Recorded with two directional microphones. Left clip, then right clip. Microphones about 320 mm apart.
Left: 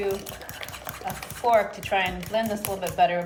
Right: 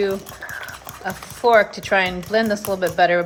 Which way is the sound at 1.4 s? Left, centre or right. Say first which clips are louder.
Right 7 dB; centre.